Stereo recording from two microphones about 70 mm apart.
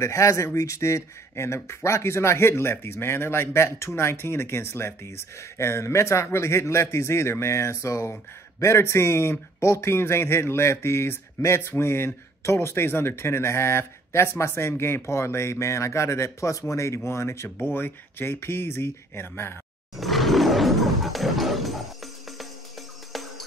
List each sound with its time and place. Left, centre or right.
0.0 s speech: left
20.0 s roar: centre